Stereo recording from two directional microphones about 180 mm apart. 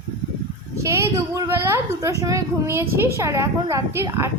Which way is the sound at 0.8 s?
15° right (ahead or behind).